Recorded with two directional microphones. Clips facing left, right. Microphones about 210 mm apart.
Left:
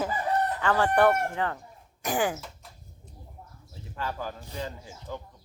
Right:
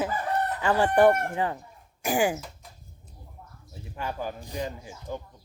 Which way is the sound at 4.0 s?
15° right (ahead or behind).